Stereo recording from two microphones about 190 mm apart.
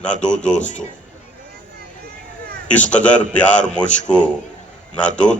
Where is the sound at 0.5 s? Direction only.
40° left (ahead or behind).